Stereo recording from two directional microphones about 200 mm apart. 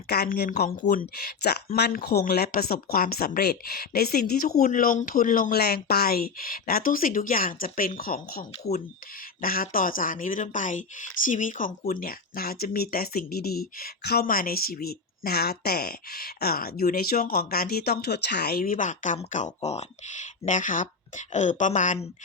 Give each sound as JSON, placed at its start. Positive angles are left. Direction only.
{"t": 0.1, "sound": "speech", "side_deg": 50}